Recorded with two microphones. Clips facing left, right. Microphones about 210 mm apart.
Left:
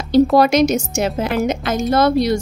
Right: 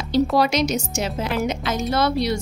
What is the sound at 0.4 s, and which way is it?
A woman's voice, 50° left (ahead or behind).